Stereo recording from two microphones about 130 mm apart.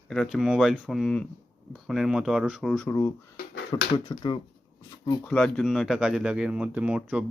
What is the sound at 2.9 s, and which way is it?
Speech, 25° left (ahead or behind).